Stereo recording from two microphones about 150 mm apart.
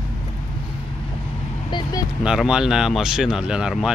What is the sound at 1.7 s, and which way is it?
Vehicle, 30° left (ahead or behind).